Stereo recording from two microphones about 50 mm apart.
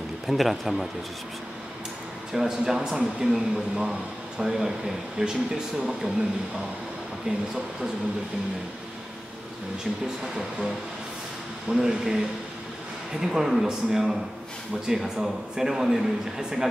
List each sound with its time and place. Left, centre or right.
0.3 s a man's voice: centre
2.3 s speech: centre
7.3 s speech: centre
11.7 s speech: centre